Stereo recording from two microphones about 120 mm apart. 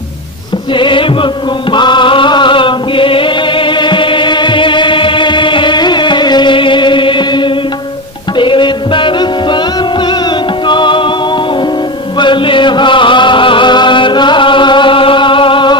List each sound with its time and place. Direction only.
0.7 s music: 45° left (ahead or behind)
12.2 s chant: 45° left (ahead or behind)